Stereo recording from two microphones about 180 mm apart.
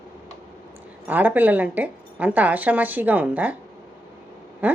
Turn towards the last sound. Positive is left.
turn(degrees=-10)  # may be behind; listen again after turning